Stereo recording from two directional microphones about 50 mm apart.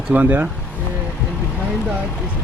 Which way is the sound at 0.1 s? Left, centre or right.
Right.